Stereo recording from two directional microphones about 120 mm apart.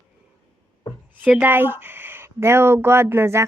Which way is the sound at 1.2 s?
15° right (ahead or behind).